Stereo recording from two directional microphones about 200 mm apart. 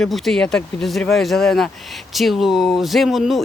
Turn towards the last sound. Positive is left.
turn(degrees=0)  # may be behind; listen again after turning